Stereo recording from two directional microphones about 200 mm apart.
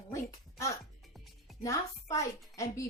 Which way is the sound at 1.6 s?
15° left (ahead or behind).